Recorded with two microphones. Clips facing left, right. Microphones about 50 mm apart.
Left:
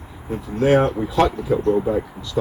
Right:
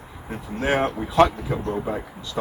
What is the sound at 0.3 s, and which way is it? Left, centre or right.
Speech, centre.